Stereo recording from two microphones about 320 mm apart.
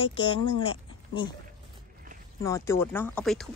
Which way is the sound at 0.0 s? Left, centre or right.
Centre.